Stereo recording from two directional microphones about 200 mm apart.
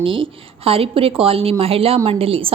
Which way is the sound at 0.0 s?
25° right (ahead or behind).